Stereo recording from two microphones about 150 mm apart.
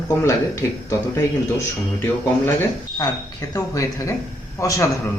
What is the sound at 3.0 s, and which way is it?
A man's voice, 20° left (ahead or behind).